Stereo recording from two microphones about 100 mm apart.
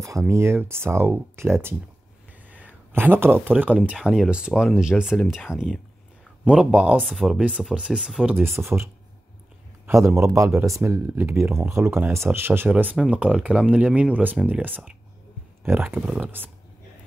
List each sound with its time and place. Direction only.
0.3 s speech: 25° right (ahead or behind); by 7.0 s 10° right (ahead or behind)
7.0 s speech: centre (ahead or behind)
7.3 s speech: 10° right (ahead or behind)
8.5 s speech: 25° right (ahead or behind)